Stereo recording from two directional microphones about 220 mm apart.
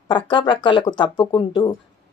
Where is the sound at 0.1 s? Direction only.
20° left (ahead or behind).